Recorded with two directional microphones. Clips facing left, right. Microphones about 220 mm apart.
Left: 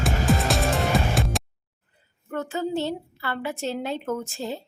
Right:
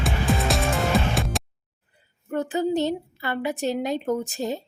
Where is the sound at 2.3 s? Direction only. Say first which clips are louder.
Right 4 dB; 15° right (ahead or behind).